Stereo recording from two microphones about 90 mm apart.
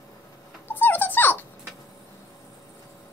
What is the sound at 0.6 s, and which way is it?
Dog, 25° left (ahead or behind).